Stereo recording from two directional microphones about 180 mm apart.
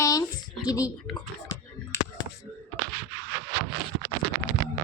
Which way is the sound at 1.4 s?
20° left (ahead or behind).